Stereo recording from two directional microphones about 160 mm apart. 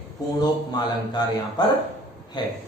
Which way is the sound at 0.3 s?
25° left (ahead or behind).